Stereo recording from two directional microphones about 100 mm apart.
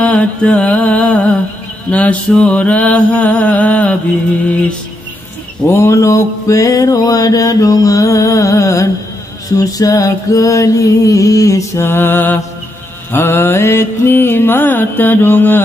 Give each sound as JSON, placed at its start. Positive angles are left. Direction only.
{"t": 0.0, "sound": "music", "side_deg": 10}
{"t": 1.9, "sound": "mantra", "side_deg": 15}
{"t": 5.7, "sound": "mantra", "side_deg": 30}